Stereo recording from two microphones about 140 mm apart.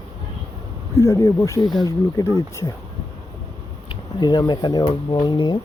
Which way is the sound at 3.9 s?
30° left (ahead or behind).